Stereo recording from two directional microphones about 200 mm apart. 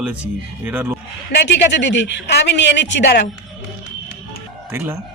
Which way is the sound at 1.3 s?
60° left (ahead or behind).